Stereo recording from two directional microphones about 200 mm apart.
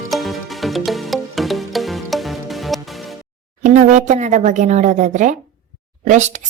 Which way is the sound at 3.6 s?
35° right (ahead or behind).